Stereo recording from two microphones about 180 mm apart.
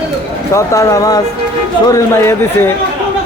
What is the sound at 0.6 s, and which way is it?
A man's voice, 20° left (ahead or behind).